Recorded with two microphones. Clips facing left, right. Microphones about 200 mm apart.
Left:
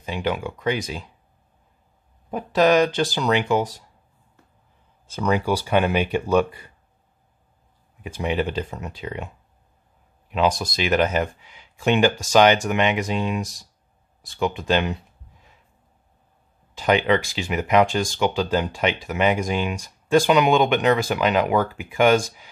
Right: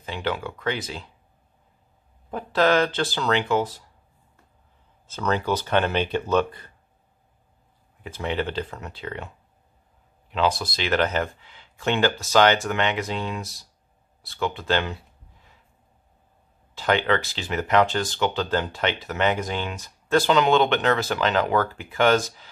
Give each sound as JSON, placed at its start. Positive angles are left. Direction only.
{"t": 0.0, "sound": "speech", "side_deg": 15}
{"t": 2.3, "sound": "speech", "side_deg": 15}
{"t": 5.0, "sound": "speech", "side_deg": 15}
{"t": 8.0, "sound": "speech", "side_deg": 15}
{"t": 10.3, "sound": "speech", "side_deg": 15}
{"t": 16.7, "sound": "speech", "side_deg": 15}